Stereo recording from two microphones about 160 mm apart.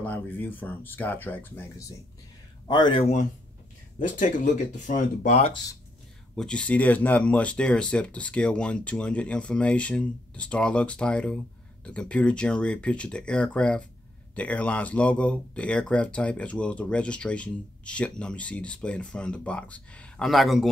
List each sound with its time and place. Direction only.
0.0 s speech: 10° left (ahead or behind)
2.7 s speech: 30° left (ahead or behind)
3.0 s speech: 45° left (ahead or behind)
6.3 s speech: 5° left (ahead or behind)